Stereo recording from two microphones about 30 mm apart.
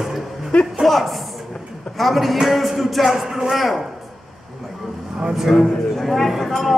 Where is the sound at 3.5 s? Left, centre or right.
Centre.